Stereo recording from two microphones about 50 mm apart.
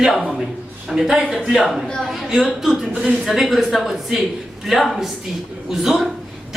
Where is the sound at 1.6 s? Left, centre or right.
Centre.